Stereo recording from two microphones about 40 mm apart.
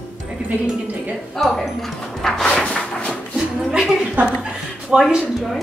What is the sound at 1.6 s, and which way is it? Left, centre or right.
Speech, centre.